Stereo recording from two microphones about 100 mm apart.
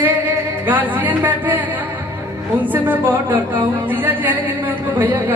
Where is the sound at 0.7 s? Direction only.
15° right (ahead or behind).